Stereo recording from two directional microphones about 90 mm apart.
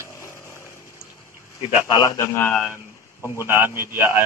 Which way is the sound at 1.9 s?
35° left (ahead or behind).